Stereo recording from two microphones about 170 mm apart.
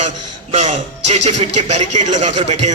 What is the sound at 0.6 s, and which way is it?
A man's voice, 40° right (ahead or behind).